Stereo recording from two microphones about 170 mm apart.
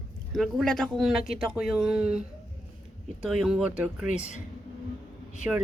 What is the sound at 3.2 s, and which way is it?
Speech, centre (ahead or behind).